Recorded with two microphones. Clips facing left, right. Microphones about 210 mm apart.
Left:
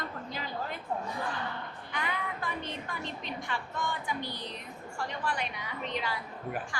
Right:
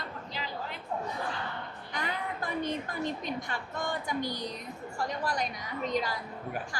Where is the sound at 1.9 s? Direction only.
40° right (ahead or behind).